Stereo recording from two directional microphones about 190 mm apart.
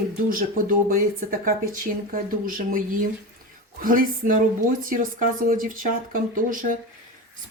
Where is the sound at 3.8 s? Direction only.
45° right (ahead or behind).